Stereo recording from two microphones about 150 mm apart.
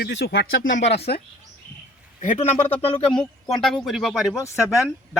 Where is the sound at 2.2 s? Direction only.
50° left (ahead or behind).